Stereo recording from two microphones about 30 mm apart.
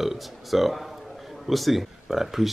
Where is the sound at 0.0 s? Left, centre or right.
Centre.